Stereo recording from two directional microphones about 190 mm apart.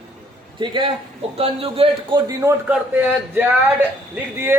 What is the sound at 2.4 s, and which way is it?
Speech, 15° right (ahead or behind).